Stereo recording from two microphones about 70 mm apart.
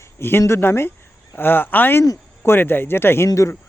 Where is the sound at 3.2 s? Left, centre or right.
Left.